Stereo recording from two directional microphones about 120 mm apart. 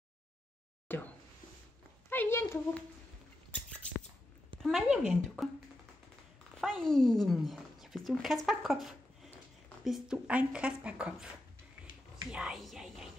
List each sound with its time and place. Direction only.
0.8 s a sound: 15° left (ahead or behind)
2.0 s speech: 20° left (ahead or behind)
4.6 s speech: 5° right (ahead or behind)
6.6 s a woman's voice: 5° left (ahead or behind)
12.3 s speech: 5° right (ahead or behind)